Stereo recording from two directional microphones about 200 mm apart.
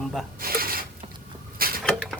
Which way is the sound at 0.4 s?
45° right (ahead or behind).